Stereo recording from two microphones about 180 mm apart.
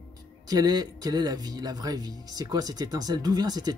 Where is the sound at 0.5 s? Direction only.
20° right (ahead or behind).